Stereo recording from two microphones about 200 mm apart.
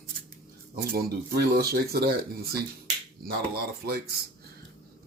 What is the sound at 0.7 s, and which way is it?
Speech, 50° right (ahead or behind).